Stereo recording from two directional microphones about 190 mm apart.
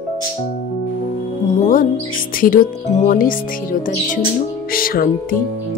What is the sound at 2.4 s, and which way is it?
Speech, 45° left (ahead or behind).